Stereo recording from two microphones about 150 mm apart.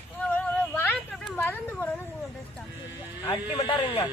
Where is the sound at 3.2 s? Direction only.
25° left (ahead or behind).